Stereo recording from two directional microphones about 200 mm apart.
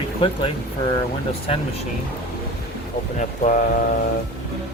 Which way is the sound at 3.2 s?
40° left (ahead or behind).